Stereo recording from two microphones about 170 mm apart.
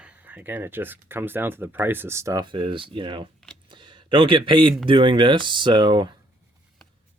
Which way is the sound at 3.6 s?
25° right (ahead or behind).